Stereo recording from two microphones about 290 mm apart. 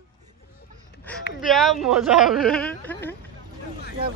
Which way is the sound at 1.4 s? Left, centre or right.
Centre.